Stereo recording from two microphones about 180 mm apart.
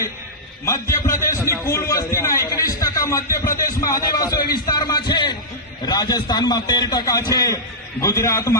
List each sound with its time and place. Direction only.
0.6 s a man's voice: 15° left (ahead or behind)